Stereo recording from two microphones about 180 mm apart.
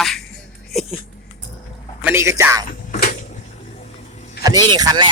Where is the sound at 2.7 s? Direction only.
50° left (ahead or behind).